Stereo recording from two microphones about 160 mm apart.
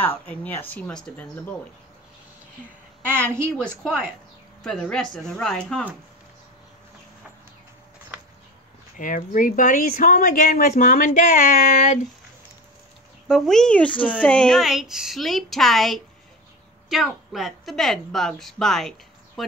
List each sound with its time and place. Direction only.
0.3 s speech: 10° left (ahead or behind)
3.1 s a woman's voice: 15° right (ahead or behind)
3.5 s speech: 5° left (ahead or behind)
8.9 s speech: 55° left (ahead or behind)
13.3 s speech: 5° left (ahead or behind)